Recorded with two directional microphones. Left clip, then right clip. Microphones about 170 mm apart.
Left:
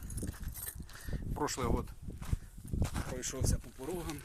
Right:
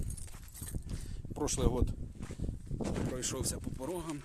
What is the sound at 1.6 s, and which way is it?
Speech, centre (ahead or behind).